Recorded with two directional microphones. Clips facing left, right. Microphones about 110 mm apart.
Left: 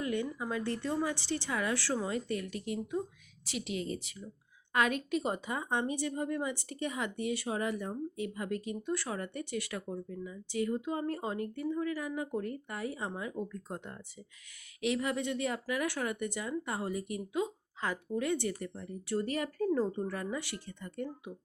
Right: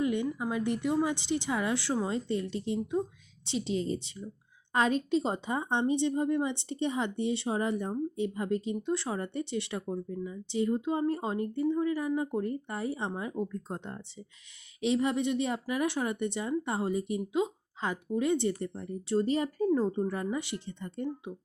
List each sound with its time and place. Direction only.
0.0 s speech: 20° right (ahead or behind)